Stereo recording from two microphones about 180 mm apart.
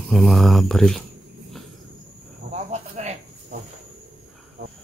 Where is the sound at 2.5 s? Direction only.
40° right (ahead or behind).